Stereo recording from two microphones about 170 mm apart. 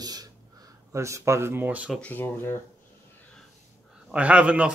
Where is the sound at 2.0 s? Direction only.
10° left (ahead or behind).